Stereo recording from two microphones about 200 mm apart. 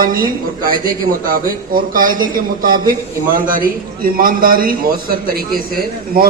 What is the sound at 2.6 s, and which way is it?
A man's voice, 45° right (ahead or behind).